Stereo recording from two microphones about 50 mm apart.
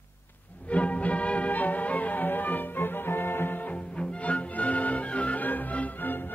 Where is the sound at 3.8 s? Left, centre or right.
Left.